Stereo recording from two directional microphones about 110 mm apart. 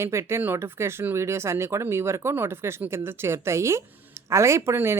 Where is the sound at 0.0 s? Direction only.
25° right (ahead or behind).